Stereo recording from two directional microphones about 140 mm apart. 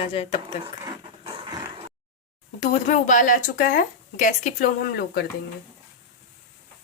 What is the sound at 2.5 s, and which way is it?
Speech, 65° left (ahead or behind).